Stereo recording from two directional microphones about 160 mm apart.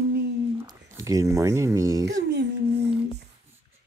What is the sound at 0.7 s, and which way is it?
Speech, 20° right (ahead or behind).